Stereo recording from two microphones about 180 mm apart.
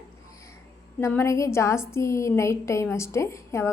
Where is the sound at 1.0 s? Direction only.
15° left (ahead or behind).